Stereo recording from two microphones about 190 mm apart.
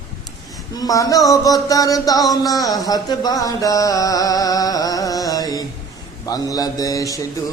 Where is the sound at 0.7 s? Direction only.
20° left (ahead or behind).